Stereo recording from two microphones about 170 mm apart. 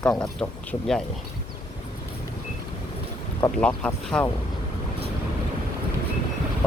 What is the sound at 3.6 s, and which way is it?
Speech, 5° left (ahead or behind).